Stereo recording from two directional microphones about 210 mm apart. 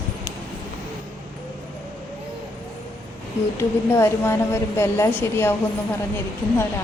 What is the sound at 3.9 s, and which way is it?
Speech, 10° left (ahead or behind).